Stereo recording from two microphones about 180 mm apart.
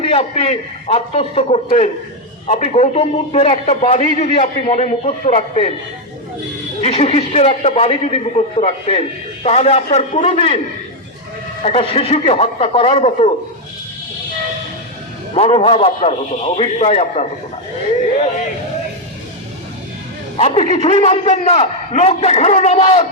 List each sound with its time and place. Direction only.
0.0 s a man's voice: 35° left (ahead or behind)
6.8 s a man's voice: 35° left (ahead or behind)
11.6 s a man's voice: 35° left (ahead or behind)
15.4 s a man's voice: 35° left (ahead or behind)
20.3 s a man's voice: 35° left (ahead or behind)